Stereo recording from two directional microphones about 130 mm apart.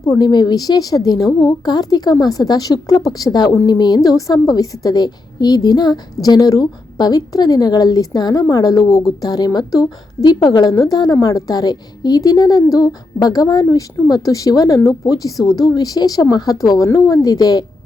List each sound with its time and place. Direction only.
0.1 s a woman's voice: 30° left (ahead or behind)